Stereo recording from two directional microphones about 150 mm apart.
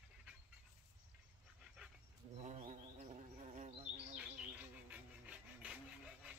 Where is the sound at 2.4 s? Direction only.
50° right (ahead or behind).